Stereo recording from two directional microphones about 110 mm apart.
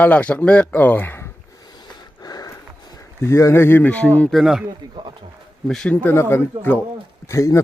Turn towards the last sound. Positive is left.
turn(degrees=30)  # may be behind; listen again after turning